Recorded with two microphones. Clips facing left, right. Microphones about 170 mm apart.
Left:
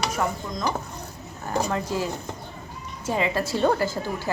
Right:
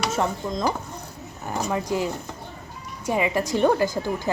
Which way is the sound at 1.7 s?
15° right (ahead or behind).